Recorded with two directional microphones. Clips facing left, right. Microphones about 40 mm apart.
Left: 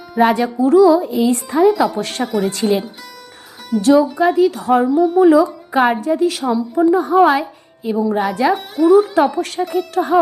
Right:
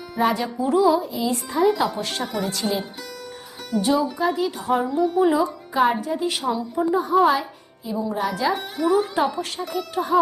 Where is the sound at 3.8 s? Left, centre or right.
Left.